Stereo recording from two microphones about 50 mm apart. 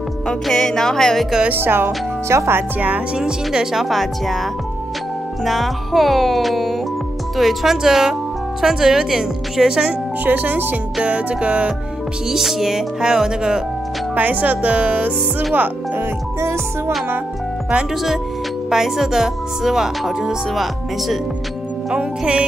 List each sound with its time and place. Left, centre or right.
0.3 s music: centre
1.5 s speech: right
2.2 s speech: right
3.2 s speech: centre
3.8 s speech: centre
10.2 s speech: right
11.0 s speech: right
12.3 s speech: centre
14.1 s speech: right
16.0 s speech: right
18.7 s speech: centre
21.9 s speech: centre